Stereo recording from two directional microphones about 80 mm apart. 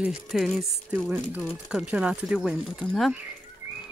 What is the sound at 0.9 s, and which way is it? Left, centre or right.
Speech, right.